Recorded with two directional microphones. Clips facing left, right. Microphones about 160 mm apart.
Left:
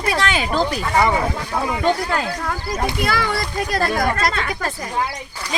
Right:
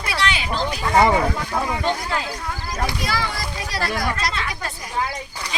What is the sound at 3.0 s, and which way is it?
A child's voice, 55° left (ahead or behind).